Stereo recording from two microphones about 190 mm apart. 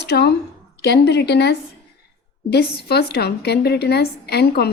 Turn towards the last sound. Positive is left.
turn(degrees=60)  # may be behind; listen again after turning